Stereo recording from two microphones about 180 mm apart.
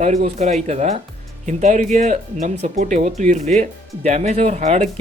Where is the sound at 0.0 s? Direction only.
40° right (ahead or behind).